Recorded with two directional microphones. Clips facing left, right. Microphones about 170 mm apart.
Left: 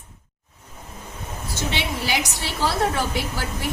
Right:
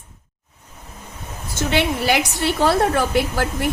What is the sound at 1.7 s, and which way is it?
A woman's voice, 55° right (ahead or behind).